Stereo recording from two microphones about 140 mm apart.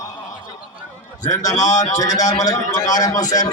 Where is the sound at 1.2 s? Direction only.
25° left (ahead or behind).